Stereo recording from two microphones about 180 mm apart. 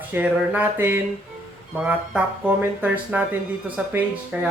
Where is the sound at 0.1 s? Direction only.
10° right (ahead or behind).